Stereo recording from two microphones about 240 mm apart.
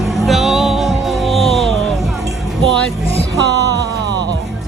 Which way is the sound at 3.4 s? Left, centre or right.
Right.